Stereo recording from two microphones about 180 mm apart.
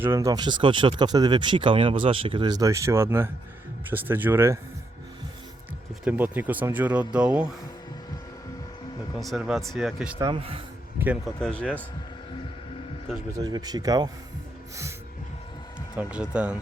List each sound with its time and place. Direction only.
0.0 s speech: 15° right (ahead or behind)
5.9 s speech: 10° right (ahead or behind)
9.1 s speech: centre (ahead or behind)
10.2 s speech: 25° right (ahead or behind)
11.3 s speech: 5° left (ahead or behind)
13.4 s speech: 20° right (ahead or behind)
16.0 s speech: 5° right (ahead or behind)